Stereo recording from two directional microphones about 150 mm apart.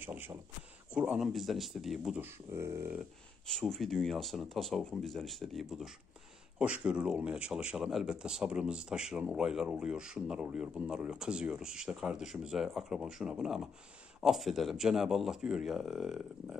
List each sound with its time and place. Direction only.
0.0 s speech: 15° right (ahead or behind)
2.2 s speech: 15° right (ahead or behind)
3.4 s speech: 5° left (ahead or behind)